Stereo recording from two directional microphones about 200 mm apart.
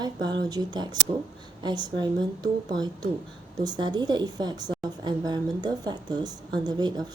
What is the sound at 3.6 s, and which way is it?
A woman's voice, 20° right (ahead or behind).